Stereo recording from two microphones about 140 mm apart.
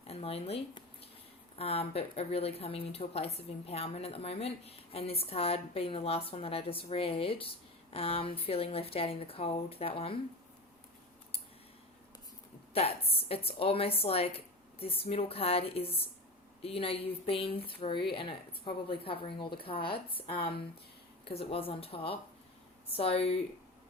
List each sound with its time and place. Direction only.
0.1 s speech: 45° left (ahead or behind)
12.7 s speech: 45° left (ahead or behind)